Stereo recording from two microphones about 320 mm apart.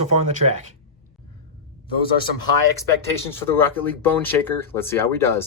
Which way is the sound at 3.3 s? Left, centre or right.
Centre.